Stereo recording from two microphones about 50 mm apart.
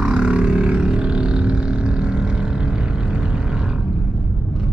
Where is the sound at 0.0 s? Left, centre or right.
Centre.